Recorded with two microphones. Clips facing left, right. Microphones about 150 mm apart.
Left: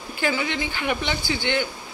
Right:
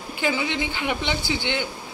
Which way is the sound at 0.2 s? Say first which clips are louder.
Even; 20° right (ahead or behind).